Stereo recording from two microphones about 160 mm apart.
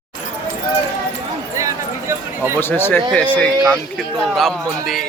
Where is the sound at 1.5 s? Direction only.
20° right (ahead or behind).